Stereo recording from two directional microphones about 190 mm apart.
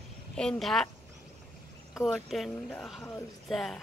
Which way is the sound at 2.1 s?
Centre (ahead or behind).